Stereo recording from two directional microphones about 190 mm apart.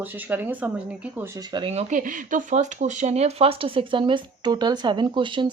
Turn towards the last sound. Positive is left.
turn(degrees=-25)  # may be behind; listen again after turning